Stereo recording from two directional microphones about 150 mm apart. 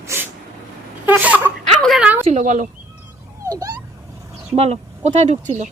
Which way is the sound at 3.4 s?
25° right (ahead or behind).